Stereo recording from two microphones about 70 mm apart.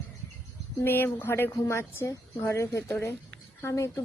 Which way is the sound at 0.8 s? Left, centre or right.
Left.